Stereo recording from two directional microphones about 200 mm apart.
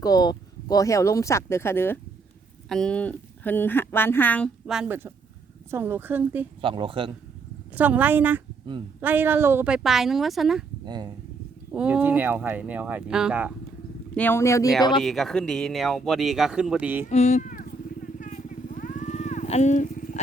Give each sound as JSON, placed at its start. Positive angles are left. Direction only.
{"t": 0.0, "sound": "speech", "side_deg": 20}
{"t": 6.6, "sound": "speech", "side_deg": -25}
{"t": 7.8, "sound": "speech", "side_deg": -10}
{"t": 10.8, "sound": "speech", "side_deg": -20}
{"t": 11.7, "sound": "speech", "side_deg": -5}
{"t": 14.2, "sound": "speech", "side_deg": 10}
{"t": 15.0, "sound": "speech", "side_deg": 0}
{"t": 17.1, "sound": "vehicle", "side_deg": 35}